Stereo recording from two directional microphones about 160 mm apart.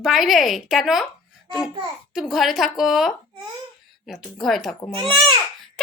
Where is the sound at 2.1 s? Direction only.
5° right (ahead or behind).